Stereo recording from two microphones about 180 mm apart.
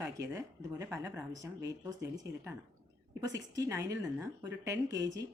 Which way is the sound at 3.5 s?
20° right (ahead or behind).